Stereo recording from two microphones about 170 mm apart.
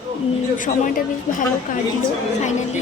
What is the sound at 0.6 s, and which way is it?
Speech, 50° left (ahead or behind).